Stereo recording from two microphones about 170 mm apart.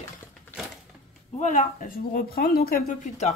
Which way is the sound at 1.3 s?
45° left (ahead or behind).